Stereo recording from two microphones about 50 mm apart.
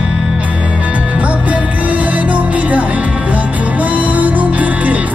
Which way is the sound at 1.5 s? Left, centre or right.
Right.